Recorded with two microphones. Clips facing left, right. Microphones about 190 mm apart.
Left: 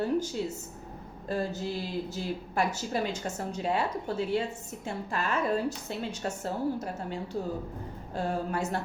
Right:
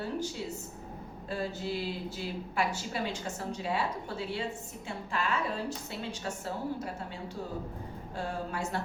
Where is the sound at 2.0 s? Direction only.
40° left (ahead or behind).